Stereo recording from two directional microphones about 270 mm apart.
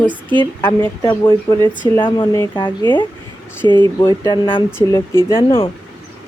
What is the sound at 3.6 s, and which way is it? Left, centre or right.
Speech, centre.